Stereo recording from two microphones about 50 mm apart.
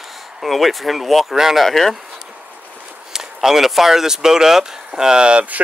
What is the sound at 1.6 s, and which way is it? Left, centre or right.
Speech, centre.